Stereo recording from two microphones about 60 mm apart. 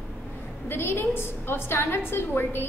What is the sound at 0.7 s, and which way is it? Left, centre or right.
A woman's voice, left.